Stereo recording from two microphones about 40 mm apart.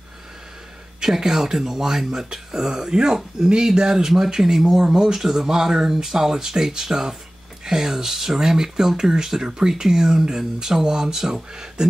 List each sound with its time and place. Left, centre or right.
1.0 s speech: centre